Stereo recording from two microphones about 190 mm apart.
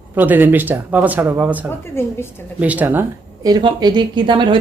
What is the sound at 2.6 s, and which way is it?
Speech, 10° right (ahead or behind).